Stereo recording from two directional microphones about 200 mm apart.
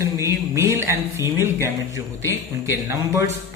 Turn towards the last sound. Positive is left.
turn(degrees=-15)  # may be behind; listen again after turning